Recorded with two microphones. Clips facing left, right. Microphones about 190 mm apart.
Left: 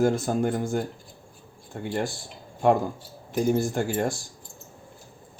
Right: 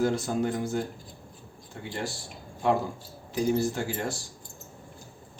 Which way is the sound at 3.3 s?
50° left (ahead or behind).